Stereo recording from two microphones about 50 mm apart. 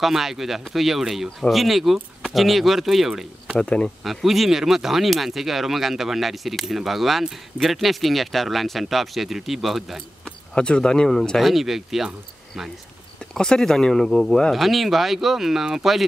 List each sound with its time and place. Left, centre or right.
0.0 s speech: centre
3.5 s speech: centre
4.0 s speech: centre
10.2 s speech: left
11.1 s speech: centre
13.3 s speech: centre